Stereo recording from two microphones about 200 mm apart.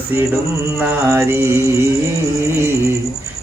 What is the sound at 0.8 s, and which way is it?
Music, 10° right (ahead or behind).